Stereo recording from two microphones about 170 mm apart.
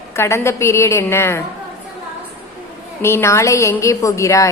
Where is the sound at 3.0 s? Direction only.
15° left (ahead or behind).